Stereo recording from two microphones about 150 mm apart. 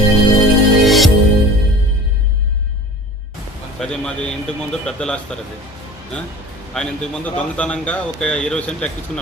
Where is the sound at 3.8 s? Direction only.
5° left (ahead or behind).